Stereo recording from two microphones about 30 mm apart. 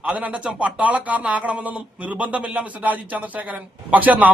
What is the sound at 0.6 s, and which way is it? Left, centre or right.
A man's voice, right.